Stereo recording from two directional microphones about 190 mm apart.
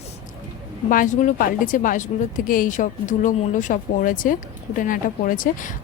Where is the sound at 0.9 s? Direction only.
45° left (ahead or behind).